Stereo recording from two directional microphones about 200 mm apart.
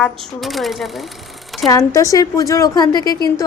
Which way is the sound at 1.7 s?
15° left (ahead or behind).